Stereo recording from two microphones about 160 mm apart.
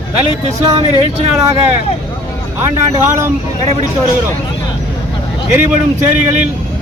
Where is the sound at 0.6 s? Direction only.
40° right (ahead or behind).